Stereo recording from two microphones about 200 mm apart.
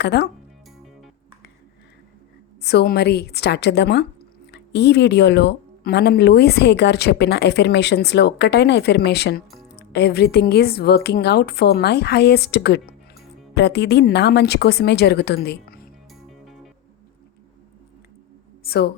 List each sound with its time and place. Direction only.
0.0 s speech: 55° left (ahead or behind)
2.6 s speech: 55° left (ahead or behind)
18.6 s speech: 50° left (ahead or behind)